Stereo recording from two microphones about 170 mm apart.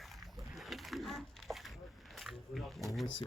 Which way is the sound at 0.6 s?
Centre (ahead or behind).